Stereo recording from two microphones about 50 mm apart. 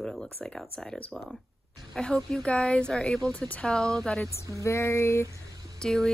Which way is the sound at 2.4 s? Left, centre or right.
Centre.